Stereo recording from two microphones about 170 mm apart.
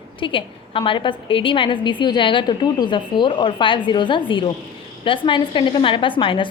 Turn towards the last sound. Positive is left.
turn(degrees=30)  # may be behind; listen again after turning